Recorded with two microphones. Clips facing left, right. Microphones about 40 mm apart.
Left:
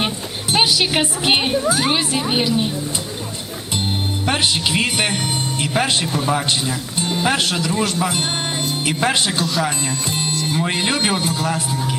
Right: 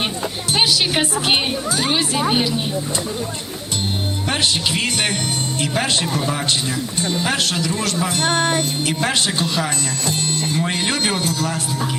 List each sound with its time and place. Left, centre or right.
0.5 s a woman's voice: centre
4.3 s speech: centre